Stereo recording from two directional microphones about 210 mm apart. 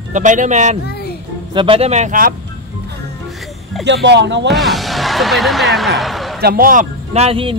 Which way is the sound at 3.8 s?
55° right (ahead or behind).